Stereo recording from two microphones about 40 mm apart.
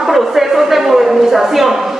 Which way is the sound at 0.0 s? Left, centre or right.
Centre.